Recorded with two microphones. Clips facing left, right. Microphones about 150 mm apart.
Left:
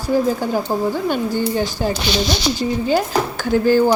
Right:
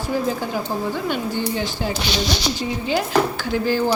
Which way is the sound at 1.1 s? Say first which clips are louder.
Left 4 dB; 45° left (ahead or behind).